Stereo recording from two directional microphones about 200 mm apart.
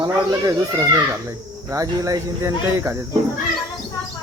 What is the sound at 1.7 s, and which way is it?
Speech, 15° right (ahead or behind).